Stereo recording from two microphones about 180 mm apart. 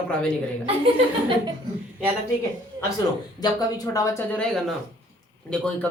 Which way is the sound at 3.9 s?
20° left (ahead or behind).